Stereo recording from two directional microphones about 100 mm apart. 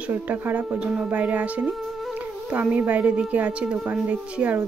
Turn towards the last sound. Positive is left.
turn(degrees=-10)  # may be behind; listen again after turning